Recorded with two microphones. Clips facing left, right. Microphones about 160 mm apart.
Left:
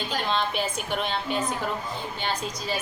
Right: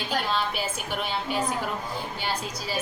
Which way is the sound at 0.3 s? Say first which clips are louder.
Left 2 dB; 5° right (ahead or behind).